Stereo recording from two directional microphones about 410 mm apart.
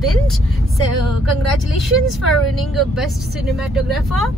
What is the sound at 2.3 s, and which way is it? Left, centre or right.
Speech, centre.